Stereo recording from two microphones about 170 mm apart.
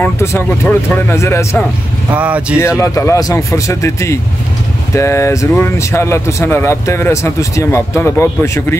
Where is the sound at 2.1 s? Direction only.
10° right (ahead or behind).